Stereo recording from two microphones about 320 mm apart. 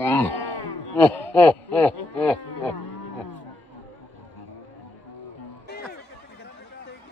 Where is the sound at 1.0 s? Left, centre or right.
Centre.